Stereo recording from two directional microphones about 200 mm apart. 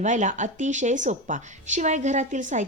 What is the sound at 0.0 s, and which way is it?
A woman's voice, 35° right (ahead or behind).